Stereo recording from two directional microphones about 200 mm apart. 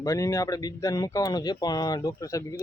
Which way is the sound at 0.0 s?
15° left (ahead or behind).